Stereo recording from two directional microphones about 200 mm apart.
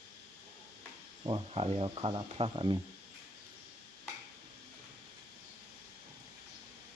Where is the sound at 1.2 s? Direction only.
25° right (ahead or behind).